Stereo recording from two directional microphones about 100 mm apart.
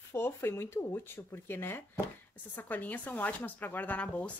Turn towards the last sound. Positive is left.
turn(degrees=15)  # may be behind; listen again after turning